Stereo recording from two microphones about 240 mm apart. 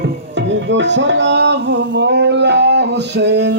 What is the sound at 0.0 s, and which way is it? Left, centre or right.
Music, right.